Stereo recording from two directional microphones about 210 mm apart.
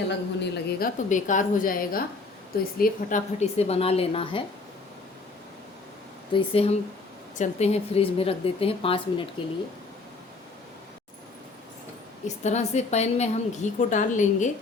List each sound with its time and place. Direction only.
0.1 s a woman's voice: 55° left (ahead or behind)
1.1 s a woman's voice: 35° left (ahead or behind)
6.3 s a woman's voice: 25° left (ahead or behind)
12.4 s a woman's voice: 35° left (ahead or behind)